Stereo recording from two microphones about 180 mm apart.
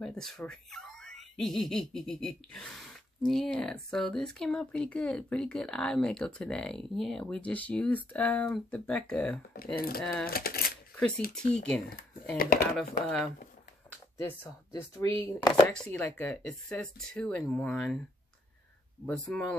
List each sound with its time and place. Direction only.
0.0 s speech: centre (ahead or behind)
9.8 s speech: 55° left (ahead or behind)
11.5 s speech: 5° left (ahead or behind)
12.4 s speech: 55° left (ahead or behind)
12.7 s speech: 5° left (ahead or behind); by 15.6 s 25° left (ahead or behind)
15.7 s speech: 5° left (ahead or behind)
19.0 s speech: 5° left (ahead or behind)